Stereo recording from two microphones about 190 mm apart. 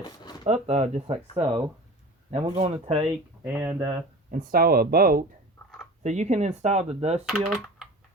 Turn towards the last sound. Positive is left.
turn(degrees=-5)  # may be behind; listen again after turning